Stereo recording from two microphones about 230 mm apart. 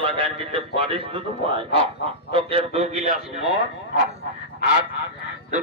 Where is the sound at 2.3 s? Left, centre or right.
Right.